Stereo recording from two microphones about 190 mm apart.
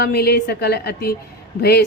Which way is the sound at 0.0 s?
55° left (ahead or behind).